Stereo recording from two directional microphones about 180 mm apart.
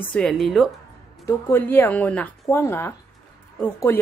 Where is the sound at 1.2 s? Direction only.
10° left (ahead or behind).